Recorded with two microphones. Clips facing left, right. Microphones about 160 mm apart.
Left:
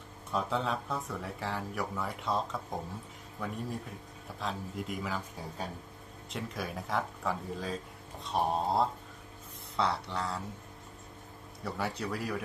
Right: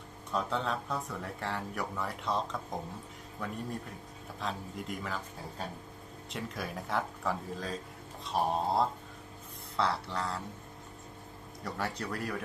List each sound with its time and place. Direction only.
0.3 s speech: centre (ahead or behind)
11.6 s speech: centre (ahead or behind)